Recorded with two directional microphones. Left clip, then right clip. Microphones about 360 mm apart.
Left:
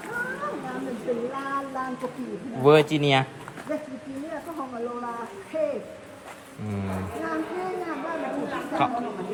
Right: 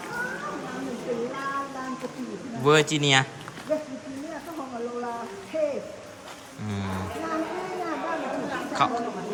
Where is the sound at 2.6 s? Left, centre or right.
Centre.